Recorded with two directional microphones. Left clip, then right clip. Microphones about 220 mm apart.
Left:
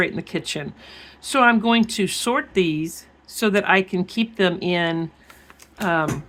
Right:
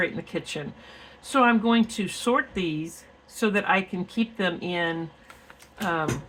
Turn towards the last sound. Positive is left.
turn(degrees=45)  # may be behind; listen again after turning